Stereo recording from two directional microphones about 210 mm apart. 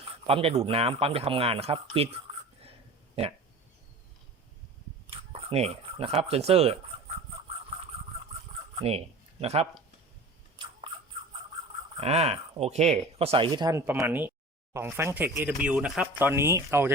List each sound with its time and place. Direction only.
0.0 s speech: 25° right (ahead or behind)
5.1 s a sound: 25° right (ahead or behind)
6.2 s speech: 30° right (ahead or behind)
8.7 s a sound: 30° right (ahead or behind)
9.4 s speech: 30° right (ahead or behind)
11.9 s speech: 30° right (ahead or behind); by 16.9 s 10° right (ahead or behind)